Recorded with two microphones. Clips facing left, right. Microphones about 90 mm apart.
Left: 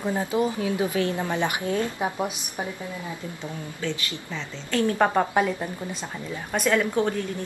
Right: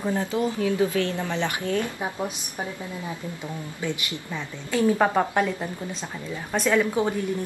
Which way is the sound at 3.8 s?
15° right (ahead or behind).